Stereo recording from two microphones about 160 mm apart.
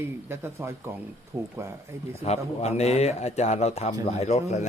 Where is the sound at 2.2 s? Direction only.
45° left (ahead or behind).